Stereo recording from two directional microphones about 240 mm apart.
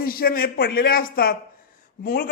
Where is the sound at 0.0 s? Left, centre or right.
Left.